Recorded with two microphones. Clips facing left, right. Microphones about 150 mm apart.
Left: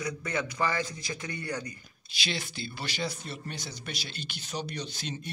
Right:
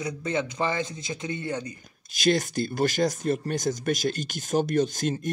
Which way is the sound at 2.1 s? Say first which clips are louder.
Right 13 dB; 45° right (ahead or behind).